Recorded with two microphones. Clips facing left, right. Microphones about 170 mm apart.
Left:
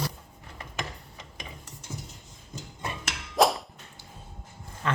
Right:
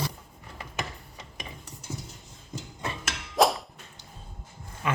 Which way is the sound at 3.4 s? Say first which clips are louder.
Even; centre (ahead or behind).